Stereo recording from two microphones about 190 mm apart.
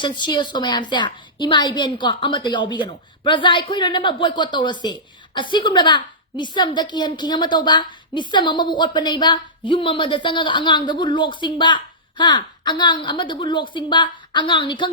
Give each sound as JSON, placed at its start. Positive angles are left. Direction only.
{"t": 0.0, "sound": "a woman's voice", "side_deg": 25}